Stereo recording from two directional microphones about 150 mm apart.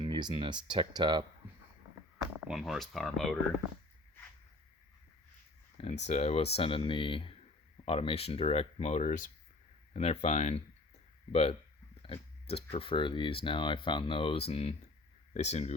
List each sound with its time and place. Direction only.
0.0 s speech: 30° right (ahead or behind)
2.4 s speech: 5° right (ahead or behind)
5.7 s speech: 45° left (ahead or behind)
9.9 s speech: 45° left (ahead or behind)
12.0 s pig: 40° left (ahead or behind)
12.7 s speech: 35° left (ahead or behind)